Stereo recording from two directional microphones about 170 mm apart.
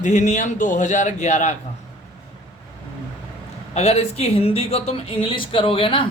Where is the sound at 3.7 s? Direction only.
40° left (ahead or behind).